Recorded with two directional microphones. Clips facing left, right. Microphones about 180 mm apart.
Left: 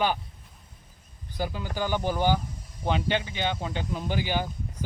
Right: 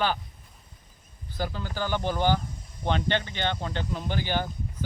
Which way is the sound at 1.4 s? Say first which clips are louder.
Left 1 dB; 10° left (ahead or behind).